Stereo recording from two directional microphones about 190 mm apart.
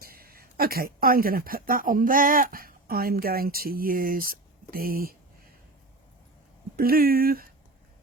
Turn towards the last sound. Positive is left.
turn(degrees=-50)  # may be behind; listen again after turning